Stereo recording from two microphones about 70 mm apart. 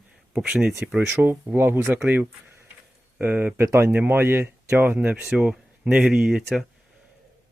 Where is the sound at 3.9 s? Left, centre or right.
Right.